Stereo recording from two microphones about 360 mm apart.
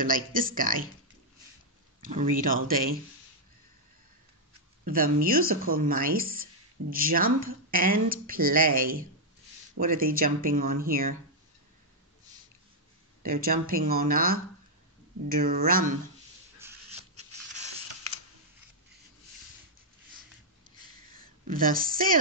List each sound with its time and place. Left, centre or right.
0.0 s speech: right
2.0 s speech: right
4.8 s speech: right
13.2 s speech: right
16.6 s a sound: centre
17.1 s zipper: centre
21.2 s speech: right